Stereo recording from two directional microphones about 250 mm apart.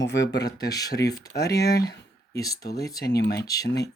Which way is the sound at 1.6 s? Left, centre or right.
Left.